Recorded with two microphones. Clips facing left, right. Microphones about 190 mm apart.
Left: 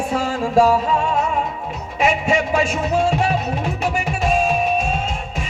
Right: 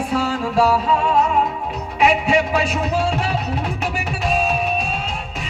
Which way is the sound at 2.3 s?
45° left (ahead or behind).